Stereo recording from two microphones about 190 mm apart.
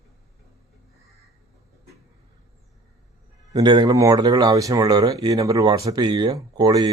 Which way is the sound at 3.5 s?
25° right (ahead or behind).